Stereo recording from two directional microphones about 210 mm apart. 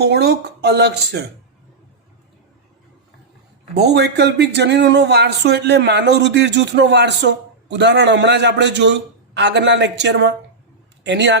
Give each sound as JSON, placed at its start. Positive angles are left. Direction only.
{"t": 0.0, "sound": "speech", "side_deg": -50}
{"t": 3.8, "sound": "a man's voice", "side_deg": -50}